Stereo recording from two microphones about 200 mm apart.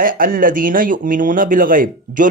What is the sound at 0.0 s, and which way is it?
Speech, 45° right (ahead or behind).